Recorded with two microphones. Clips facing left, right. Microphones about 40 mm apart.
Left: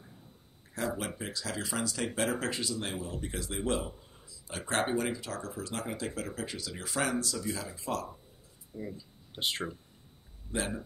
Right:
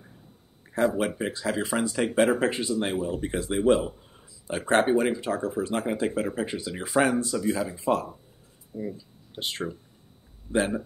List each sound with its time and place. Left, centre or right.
0.7 s speech: right
8.7 s speech: centre
10.5 s speech: right